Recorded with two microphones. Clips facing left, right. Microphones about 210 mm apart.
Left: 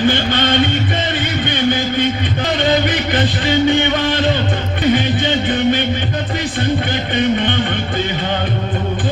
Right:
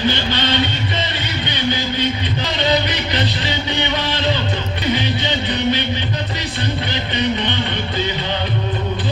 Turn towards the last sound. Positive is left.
turn(degrees=50)  # may be behind; listen again after turning